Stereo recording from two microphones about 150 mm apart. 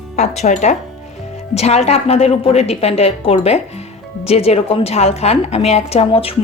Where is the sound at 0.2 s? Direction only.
50° left (ahead or behind).